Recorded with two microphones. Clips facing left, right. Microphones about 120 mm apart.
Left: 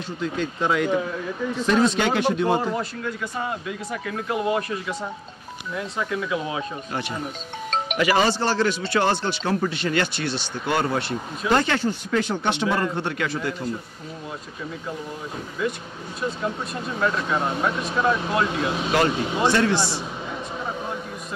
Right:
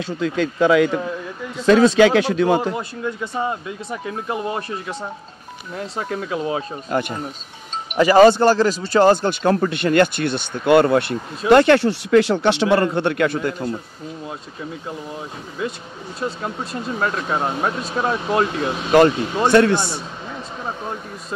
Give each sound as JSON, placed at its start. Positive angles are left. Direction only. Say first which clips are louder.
{"t": 0.2, "sound": "speech", "louder": "right 7 dB", "side_deg": -90}
{"t": 2.8, "sound": "speech", "louder": "right 3 dB", "side_deg": -25}
{"t": 5.8, "sound": "speech", "louder": "right 1 dB", "side_deg": -45}
{"t": 6.9, "sound": "speech", "louder": "right 11 dB", "side_deg": -50}
{"t": 8.0, "sound": "speech", "louder": "right 10 dB", "side_deg": -35}
{"t": 8.3, "sound": "speech", "louder": "right 7 dB", "side_deg": -50}
{"t": 17.0, "sound": "speech", "louder": "right 1 dB", "side_deg": -35}
{"t": 18.9, "sound": "speech", "louder": "right 9 dB", "side_deg": -55}